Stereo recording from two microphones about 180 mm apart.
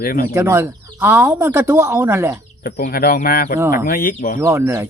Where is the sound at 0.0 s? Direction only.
55° left (ahead or behind).